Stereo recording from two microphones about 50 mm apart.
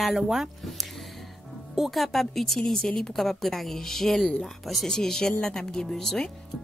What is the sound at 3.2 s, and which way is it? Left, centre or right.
A woman's voice, centre.